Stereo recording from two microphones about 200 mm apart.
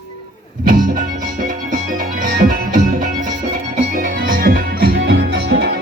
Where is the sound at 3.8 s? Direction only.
40° right (ahead or behind).